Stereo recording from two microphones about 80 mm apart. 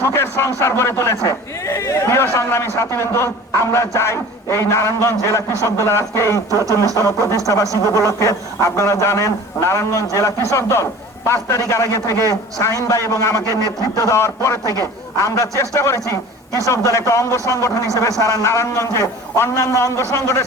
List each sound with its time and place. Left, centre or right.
0.0 s a man's voice: left